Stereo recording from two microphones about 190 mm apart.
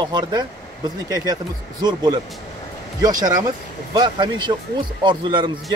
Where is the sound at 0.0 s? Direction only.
20° right (ahead or behind).